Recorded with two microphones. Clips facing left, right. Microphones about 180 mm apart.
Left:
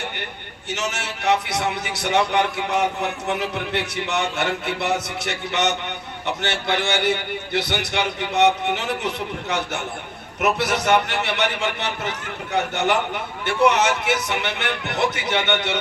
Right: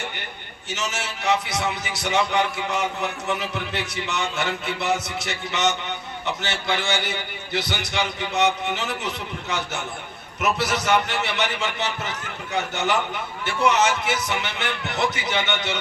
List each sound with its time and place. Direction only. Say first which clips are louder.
0.7 s a man's voice: left 2 dB; 60° left (ahead or behind)